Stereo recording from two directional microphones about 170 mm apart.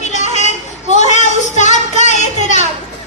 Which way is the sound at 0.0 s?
45° left (ahead or behind).